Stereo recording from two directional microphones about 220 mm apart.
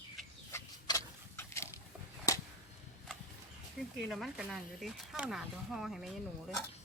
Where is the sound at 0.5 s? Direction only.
15° left (ahead or behind).